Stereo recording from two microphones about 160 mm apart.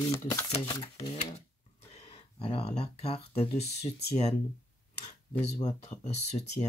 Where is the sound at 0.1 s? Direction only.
20° left (ahead or behind).